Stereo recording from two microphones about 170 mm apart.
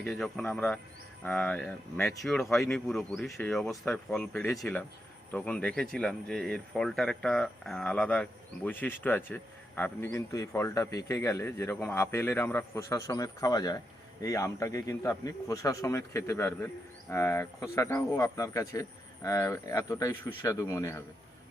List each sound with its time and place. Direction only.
0.0 s speech: 5° left (ahead or behind)